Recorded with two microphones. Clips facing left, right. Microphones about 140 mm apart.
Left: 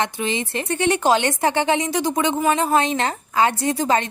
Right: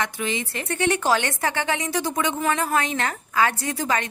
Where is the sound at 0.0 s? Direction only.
25° left (ahead or behind).